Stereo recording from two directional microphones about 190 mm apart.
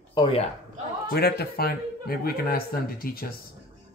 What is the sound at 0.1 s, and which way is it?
Speech, 30° left (ahead or behind).